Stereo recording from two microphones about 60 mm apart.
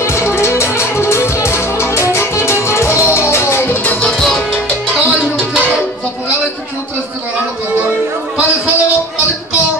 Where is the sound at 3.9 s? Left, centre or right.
Centre.